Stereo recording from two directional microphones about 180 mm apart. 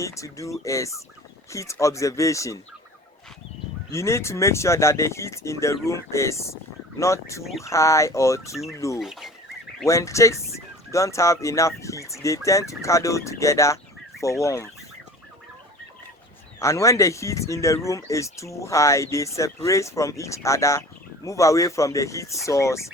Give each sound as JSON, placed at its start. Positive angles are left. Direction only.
{"t": 0.0, "sound": "speech", "side_deg": 15}
{"t": 3.9, "sound": "speech", "side_deg": 15}
{"t": 9.0, "sound": "speech", "side_deg": 0}
{"t": 9.8, "sound": "speech", "side_deg": 15}
{"t": 16.6, "sound": "speech", "side_deg": 15}